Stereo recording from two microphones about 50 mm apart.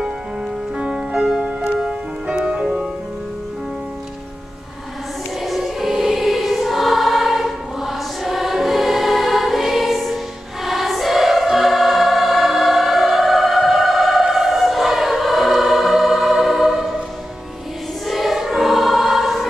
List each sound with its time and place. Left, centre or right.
1.1 s music: centre
5.4 s choir: centre
18.0 s choir: centre